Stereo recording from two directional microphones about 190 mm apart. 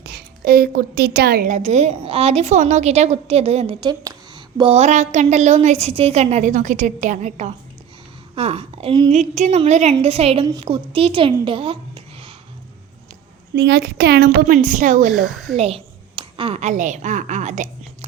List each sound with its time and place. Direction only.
0.0 s a woman's voice: 60° right (ahead or behind); by 11.3 s 25° right (ahead or behind)
11.4 s a sound: 25° right (ahead or behind)
13.6 s a woman's voice: 60° right (ahead or behind); by 15.1 s 45° right (ahead or behind)
15.1 s speech: centre (ahead or behind)
15.5 s a woman's voice: 30° right (ahead or behind)